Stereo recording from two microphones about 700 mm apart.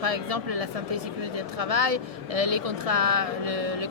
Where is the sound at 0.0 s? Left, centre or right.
Right.